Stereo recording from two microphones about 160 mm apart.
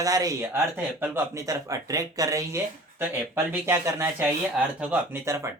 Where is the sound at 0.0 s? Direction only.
20° right (ahead or behind).